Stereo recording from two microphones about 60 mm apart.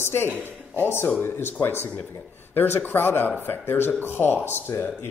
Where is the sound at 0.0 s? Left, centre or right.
Left.